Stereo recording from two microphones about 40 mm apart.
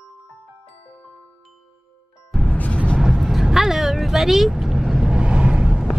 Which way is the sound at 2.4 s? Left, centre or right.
Left.